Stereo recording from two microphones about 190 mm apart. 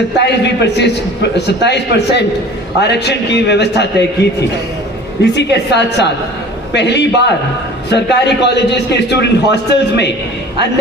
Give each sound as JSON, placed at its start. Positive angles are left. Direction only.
{"t": 0.2, "sound": "a man's voice", "side_deg": 65}